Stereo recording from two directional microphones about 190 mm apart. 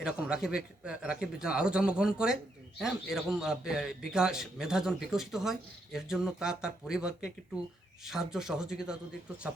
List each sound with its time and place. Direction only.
0.0 s a man's voice: 5° right (ahead or behind)